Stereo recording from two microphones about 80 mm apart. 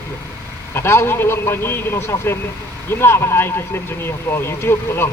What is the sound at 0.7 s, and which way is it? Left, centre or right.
A man's voice, left.